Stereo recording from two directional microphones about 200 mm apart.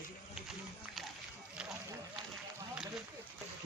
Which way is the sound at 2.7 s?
5° right (ahead or behind).